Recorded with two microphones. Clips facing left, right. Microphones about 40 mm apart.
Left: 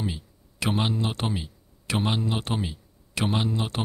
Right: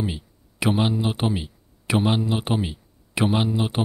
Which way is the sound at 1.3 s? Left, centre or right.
Centre.